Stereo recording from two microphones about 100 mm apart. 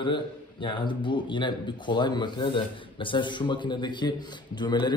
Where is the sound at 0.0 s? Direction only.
55° left (ahead or behind).